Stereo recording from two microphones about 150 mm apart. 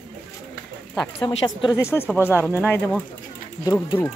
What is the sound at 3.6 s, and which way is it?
Speech, 25° left (ahead or behind).